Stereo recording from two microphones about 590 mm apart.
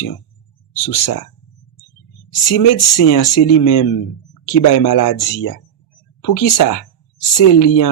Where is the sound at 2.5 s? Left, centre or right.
Left.